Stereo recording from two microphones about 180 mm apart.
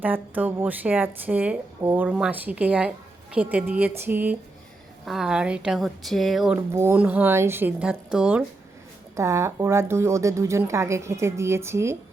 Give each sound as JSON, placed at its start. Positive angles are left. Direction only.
{"t": 0.0, "sound": "a woman's voice", "side_deg": -10}
{"t": 6.6, "sound": "a woman's voice", "side_deg": -15}